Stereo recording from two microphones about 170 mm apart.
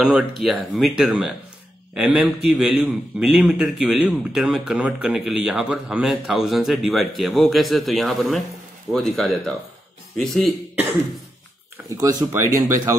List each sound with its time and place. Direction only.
0.4 s a man's voice: 5° right (ahead or behind)
12.0 s speech: 20° right (ahead or behind)